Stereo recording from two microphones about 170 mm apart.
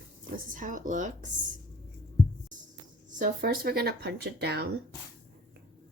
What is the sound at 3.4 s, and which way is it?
Speech, 65° right (ahead or behind).